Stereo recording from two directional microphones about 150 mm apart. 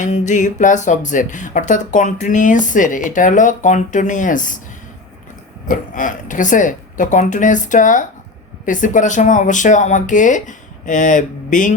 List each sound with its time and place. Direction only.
0.0 s speech: 55° left (ahead or behind)
5.6 s speech: 65° left (ahead or behind)